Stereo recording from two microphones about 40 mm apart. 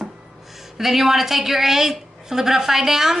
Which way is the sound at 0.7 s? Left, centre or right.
Centre.